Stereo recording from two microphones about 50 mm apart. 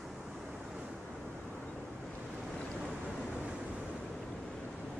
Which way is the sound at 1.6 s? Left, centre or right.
Centre.